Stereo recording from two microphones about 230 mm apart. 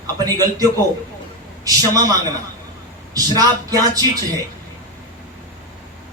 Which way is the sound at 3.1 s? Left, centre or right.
Centre.